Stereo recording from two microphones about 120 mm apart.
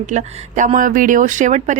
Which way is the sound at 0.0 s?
90° right.